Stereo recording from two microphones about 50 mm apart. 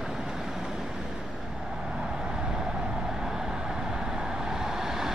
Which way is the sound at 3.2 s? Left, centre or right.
Centre.